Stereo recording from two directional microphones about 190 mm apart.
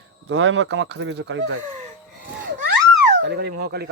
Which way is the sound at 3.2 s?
60° right (ahead or behind).